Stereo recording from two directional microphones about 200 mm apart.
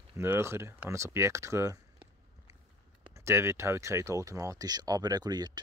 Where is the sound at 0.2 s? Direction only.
10° right (ahead or behind).